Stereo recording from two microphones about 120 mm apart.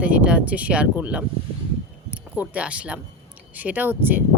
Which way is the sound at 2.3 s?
15° right (ahead or behind).